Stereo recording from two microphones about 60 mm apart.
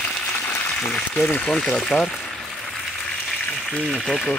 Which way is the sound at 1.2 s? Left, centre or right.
Left.